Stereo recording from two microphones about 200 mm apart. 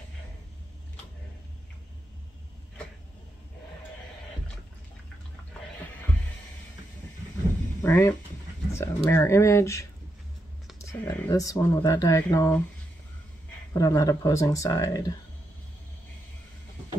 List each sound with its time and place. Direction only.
7.8 s speech: 10° left (ahead or behind)
13.7 s speech: 20° left (ahead or behind)